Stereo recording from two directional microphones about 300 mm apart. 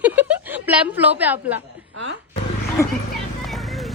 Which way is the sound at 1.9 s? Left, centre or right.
Right.